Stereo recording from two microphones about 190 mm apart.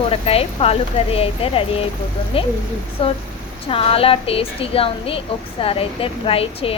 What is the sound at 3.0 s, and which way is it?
A woman's voice, 30° left (ahead or behind).